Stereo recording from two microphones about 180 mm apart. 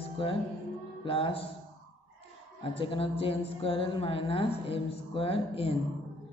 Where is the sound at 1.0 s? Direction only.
30° left (ahead or behind).